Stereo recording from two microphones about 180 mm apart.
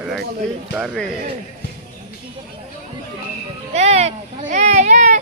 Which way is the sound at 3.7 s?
35° right (ahead or behind).